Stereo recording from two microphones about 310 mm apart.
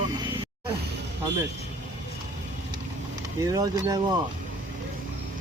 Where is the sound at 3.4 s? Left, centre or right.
Centre.